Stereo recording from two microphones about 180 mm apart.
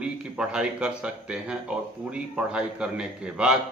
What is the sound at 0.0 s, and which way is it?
A man's voice, 5° right (ahead or behind).